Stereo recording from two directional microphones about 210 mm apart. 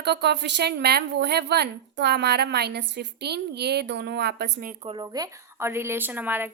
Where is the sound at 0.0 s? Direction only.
50° right (ahead or behind).